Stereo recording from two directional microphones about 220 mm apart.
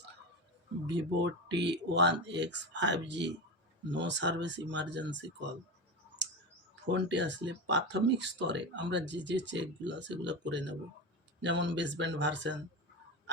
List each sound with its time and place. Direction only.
0.9 s speech: 55° right (ahead or behind)
6.9 s speech: 55° right (ahead or behind)